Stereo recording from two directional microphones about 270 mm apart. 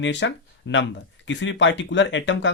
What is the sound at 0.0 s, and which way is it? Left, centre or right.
Speech, left.